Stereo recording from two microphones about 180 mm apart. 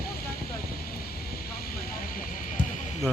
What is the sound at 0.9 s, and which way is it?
Vehicle, 55° left (ahead or behind).